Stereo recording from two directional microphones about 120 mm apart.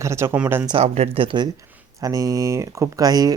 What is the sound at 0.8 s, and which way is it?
Speech, 55° right (ahead or behind).